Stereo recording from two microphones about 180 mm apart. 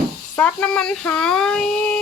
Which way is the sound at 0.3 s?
5° left (ahead or behind).